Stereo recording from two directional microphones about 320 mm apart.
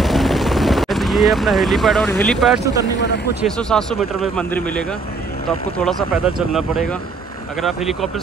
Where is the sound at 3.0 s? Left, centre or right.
Left.